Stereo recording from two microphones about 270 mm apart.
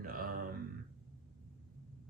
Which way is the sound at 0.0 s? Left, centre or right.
Right.